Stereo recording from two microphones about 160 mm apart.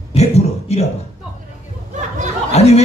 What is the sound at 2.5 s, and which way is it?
Speech, 40° left (ahead or behind).